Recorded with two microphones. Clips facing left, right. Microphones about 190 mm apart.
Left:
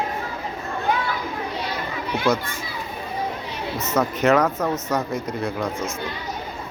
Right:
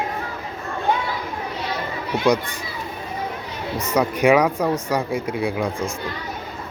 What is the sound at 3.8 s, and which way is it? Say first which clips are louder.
Speech: right 2 dB; 10° right (ahead or behind).